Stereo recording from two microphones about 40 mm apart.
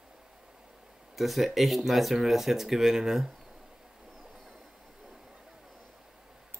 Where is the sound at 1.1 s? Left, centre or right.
Centre.